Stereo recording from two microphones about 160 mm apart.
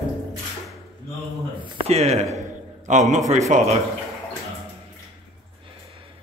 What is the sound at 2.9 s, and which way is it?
Speech, 50° right (ahead or behind).